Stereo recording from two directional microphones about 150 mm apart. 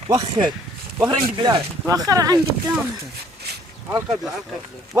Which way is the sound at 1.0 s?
30° right (ahead or behind).